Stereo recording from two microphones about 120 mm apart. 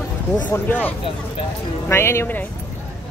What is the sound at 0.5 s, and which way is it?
Speech, 15° left (ahead or behind).